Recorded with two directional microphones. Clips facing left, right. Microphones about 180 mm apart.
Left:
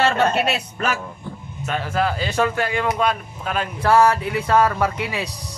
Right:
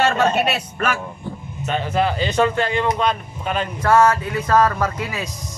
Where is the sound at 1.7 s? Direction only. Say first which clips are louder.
Right 2 dB; centre (ahead or behind).